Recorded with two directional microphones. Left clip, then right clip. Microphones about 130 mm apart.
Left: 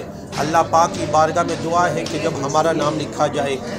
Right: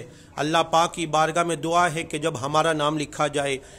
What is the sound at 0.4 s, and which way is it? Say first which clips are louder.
A man's voice: left 5 dB; 50° right (ahead or behind).